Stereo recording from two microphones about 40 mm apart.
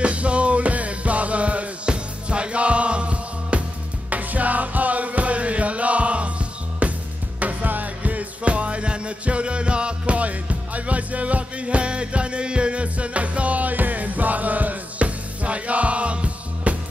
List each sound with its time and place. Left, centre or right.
0.0 s music: right
4.1 s music: right